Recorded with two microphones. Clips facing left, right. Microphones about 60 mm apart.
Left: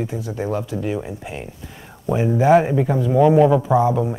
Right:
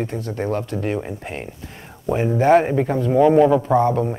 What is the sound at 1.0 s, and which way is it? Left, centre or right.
Speech, right.